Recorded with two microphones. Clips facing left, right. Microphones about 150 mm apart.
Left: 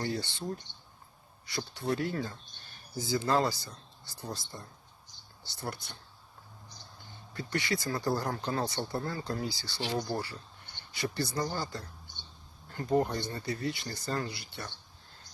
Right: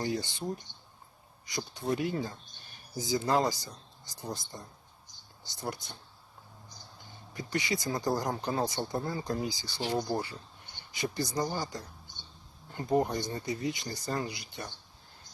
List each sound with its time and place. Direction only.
0.0 s speech: 15° right (ahead or behind)
7.3 s speech: 20° right (ahead or behind)